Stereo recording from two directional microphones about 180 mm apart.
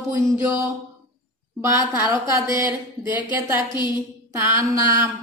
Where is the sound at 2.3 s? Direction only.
15° right (ahead or behind).